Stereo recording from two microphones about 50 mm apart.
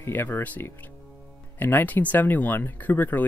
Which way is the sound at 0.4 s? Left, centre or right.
Left.